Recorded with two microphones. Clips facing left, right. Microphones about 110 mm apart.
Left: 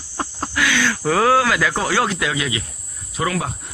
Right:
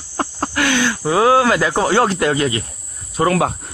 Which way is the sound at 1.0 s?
20° right (ahead or behind).